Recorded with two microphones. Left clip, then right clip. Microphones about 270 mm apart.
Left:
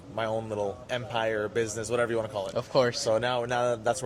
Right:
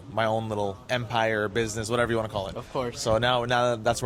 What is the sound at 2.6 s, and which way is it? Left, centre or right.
Speech, left.